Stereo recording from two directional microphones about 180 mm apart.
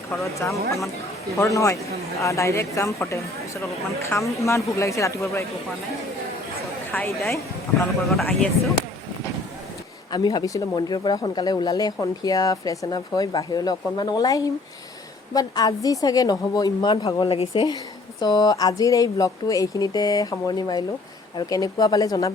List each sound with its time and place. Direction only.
0.1 s a woman's voice: 15° left (ahead or behind)
6.9 s a woman's voice: 10° left (ahead or behind)
10.1 s speech: 20° left (ahead or behind)
17.2 s speech: 35° left (ahead or behind)